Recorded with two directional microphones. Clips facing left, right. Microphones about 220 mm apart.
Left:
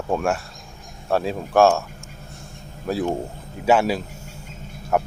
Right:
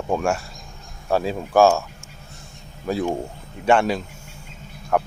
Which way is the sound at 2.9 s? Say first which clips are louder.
Even; centre (ahead or behind).